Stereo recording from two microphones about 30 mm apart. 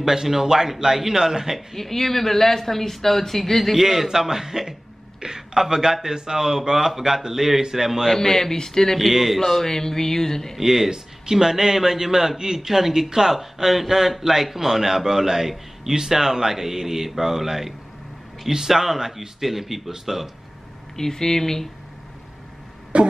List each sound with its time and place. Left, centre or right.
0.0 s speech: centre
1.8 s speech: centre
3.7 s speech: centre
8.1 s speech: centre
9.1 s speech: centre
9.6 s speech: centre
10.6 s speech: centre
20.9 s speech: centre
22.9 s music: right